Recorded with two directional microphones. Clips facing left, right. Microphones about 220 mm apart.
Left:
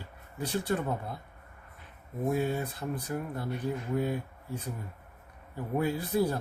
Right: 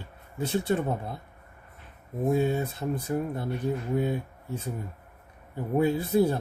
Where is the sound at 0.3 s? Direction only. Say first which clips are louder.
Right 4 dB; 25° right (ahead or behind).